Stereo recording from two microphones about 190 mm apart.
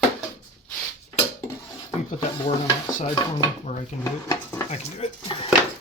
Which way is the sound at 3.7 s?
40° left (ahead or behind).